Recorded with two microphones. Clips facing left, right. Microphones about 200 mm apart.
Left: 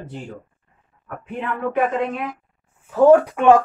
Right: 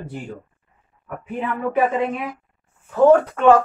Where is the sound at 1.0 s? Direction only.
5° right (ahead or behind).